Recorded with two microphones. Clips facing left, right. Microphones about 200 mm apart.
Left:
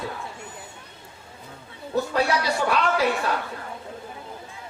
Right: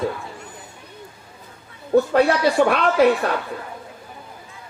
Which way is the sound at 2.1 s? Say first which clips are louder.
Right 7 dB; 55° right (ahead or behind).